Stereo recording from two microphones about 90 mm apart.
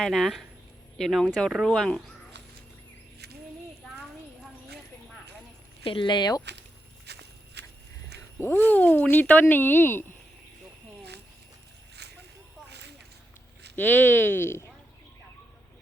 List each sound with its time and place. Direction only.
0.0 s speech: centre (ahead or behind)
5.8 s speech: 70° left (ahead or behind); by 6.4 s 50° left (ahead or behind)
8.4 s speech: 20° left (ahead or behind)
13.7 s speech: 20° left (ahead or behind)